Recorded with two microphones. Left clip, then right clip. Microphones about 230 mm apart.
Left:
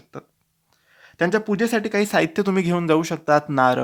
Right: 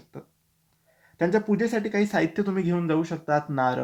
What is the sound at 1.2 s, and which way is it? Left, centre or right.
Speech, left.